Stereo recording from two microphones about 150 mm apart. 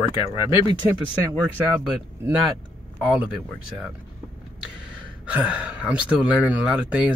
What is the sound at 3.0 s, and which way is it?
Speech, 10° right (ahead or behind).